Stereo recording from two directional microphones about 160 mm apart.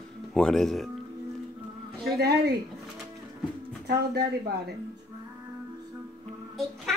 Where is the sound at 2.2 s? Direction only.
80° right.